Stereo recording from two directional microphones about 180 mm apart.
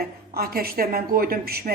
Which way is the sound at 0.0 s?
55° right (ahead or behind).